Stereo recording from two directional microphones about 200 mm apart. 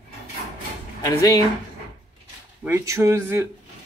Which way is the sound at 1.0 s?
20° left (ahead or behind).